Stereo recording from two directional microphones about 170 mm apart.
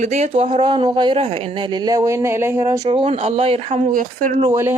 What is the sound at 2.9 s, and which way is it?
Speech, 35° right (ahead or behind).